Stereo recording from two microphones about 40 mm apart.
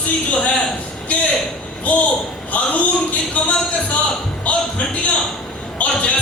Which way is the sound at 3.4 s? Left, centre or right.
Left.